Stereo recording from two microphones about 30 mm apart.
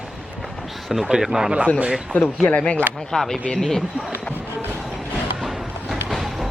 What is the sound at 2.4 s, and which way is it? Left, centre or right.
Speech, left.